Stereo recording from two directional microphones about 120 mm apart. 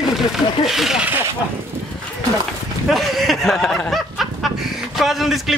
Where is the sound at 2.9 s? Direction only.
Centre (ahead or behind).